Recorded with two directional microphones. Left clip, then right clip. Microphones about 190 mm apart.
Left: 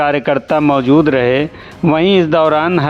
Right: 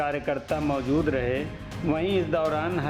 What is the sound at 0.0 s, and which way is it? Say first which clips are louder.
Speech: left 14 dB; 65° left (ahead or behind).